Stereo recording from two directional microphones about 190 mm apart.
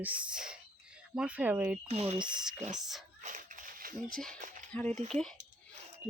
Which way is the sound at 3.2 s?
40° right (ahead or behind).